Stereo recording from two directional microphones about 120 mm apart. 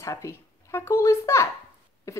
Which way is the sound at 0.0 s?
25° left (ahead or behind).